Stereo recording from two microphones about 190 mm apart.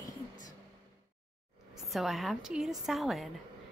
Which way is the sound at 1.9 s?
Centre (ahead or behind).